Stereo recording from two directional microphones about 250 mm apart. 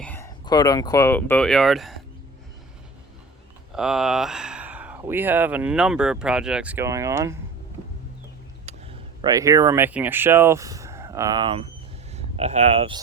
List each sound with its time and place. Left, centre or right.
0.0 s speech: centre
3.8 s speech: centre
8.6 s speech: centre